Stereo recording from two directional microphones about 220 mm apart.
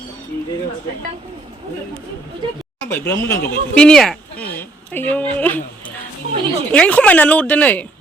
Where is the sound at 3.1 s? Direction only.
10° left (ahead or behind).